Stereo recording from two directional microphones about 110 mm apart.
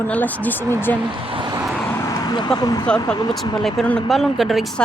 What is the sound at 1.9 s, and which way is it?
Vehicle, 30° left (ahead or behind).